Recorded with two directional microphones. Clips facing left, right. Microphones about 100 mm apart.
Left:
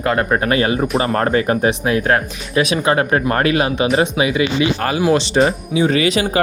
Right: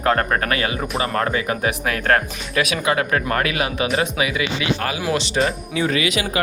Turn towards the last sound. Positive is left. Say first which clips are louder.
# left 5 dB
turn(degrees=35)  # may be behind; listen again after turning